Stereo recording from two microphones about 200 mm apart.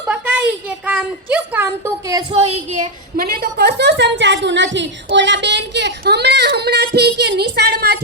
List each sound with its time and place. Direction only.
0.9 s speech: 10° right (ahead or behind)
2.4 s speech: 30° right (ahead or behind)
3.2 s a woman's voice: 50° right (ahead or behind)